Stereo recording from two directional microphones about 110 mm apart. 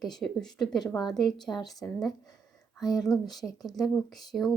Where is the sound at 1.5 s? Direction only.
20° left (ahead or behind).